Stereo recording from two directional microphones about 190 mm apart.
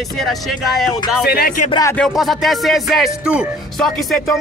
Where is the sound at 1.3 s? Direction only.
55° left (ahead or behind).